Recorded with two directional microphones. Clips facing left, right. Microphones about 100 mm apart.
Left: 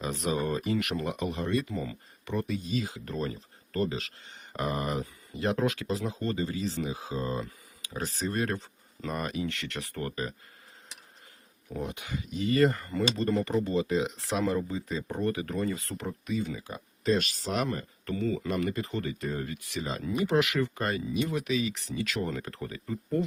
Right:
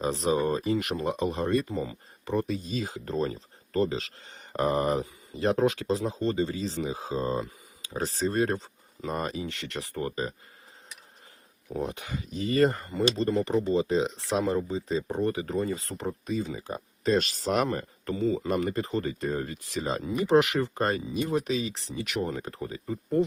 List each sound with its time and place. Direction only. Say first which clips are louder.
0.0 s speech: right 4 dB; 30° right (ahead or behind)
11.7 s speech: right 3 dB; 30° right (ahead or behind)
18.2 s speech: right 4 dB; 20° right (ahead or behind)
18.4 s speech: right 3 dB; 35° right (ahead or behind)